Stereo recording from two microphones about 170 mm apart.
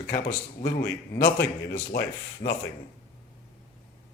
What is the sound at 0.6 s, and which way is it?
Speech, 70° left (ahead or behind).